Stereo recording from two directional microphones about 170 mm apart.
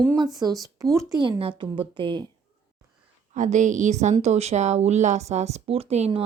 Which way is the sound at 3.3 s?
45° right (ahead or behind).